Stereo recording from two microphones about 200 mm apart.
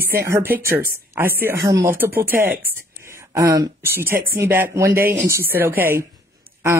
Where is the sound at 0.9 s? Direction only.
10° right (ahead or behind).